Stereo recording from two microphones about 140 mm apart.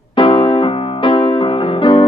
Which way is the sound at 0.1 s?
40° left (ahead or behind).